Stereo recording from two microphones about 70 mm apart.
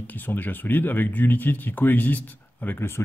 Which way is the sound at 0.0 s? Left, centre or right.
Left.